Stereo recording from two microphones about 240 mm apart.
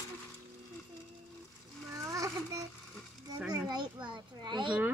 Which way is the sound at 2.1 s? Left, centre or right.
Centre.